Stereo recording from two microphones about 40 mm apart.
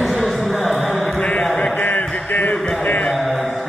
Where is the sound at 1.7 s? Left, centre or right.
Left.